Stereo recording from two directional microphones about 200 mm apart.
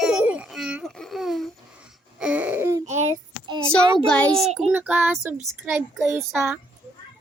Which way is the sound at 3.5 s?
25° right (ahead or behind).